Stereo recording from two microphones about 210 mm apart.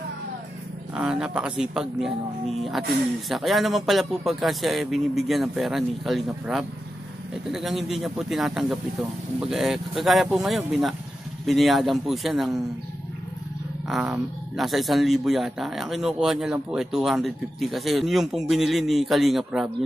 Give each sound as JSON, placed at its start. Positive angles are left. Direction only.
{"t": 0.9, "sound": "speech", "side_deg": -5}
{"t": 3.3, "sound": "speech", "side_deg": 0}
{"t": 13.8, "sound": "speech", "side_deg": -5}